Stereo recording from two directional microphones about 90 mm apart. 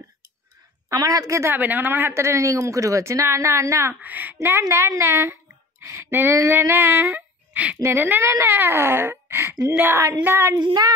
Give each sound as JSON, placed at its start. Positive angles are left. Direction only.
{"t": 0.8, "sound": "speech", "side_deg": -40}
{"t": 4.0, "sound": "speech", "side_deg": -20}
{"t": 6.0, "sound": "a sound", "side_deg": -25}
{"t": 7.6, "sound": "speech", "side_deg": -25}
{"t": 10.6, "sound": "child singing", "side_deg": -50}